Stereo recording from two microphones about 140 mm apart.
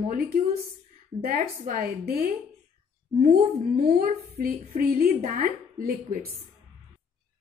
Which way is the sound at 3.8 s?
85° right.